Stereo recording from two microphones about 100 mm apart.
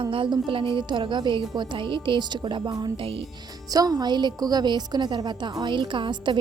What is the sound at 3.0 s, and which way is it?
Speech, 65° right (ahead or behind).